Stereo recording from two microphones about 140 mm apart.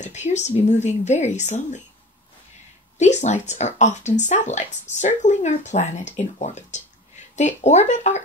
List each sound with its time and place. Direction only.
0.0 s speech: 55° left (ahead or behind)
3.0 s speech: 55° left (ahead or behind)